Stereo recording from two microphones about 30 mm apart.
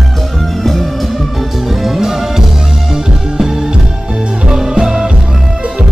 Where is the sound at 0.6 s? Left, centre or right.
Centre.